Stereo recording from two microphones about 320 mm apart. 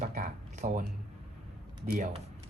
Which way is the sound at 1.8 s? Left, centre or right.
Right.